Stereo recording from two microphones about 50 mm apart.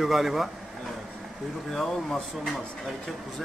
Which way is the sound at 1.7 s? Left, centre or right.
Centre.